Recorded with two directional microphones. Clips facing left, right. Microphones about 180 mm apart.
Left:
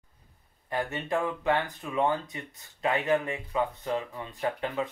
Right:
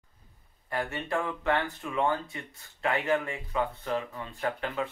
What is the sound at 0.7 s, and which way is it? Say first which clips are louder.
Speech: left 1 dB; 20° left (ahead or behind).